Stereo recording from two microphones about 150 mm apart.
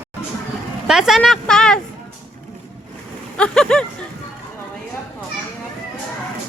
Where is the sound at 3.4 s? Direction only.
5° left (ahead or behind).